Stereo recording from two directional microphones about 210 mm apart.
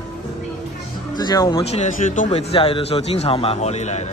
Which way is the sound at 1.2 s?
20° left (ahead or behind).